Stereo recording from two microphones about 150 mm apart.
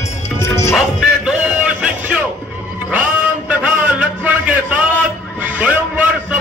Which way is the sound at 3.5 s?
10° right (ahead or behind).